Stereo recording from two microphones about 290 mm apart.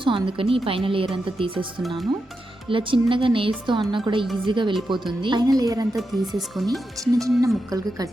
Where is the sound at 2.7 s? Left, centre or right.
Centre.